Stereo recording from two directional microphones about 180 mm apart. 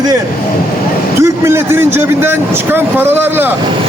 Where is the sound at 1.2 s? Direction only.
15° right (ahead or behind).